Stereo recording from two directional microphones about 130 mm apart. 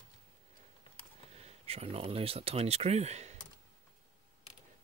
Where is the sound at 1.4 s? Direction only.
50° right (ahead or behind).